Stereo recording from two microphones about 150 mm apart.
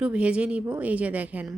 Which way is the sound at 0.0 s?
5° right (ahead or behind).